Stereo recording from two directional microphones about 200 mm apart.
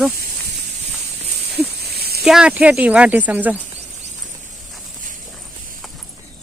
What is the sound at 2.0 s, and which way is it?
Snake, 50° right (ahead or behind).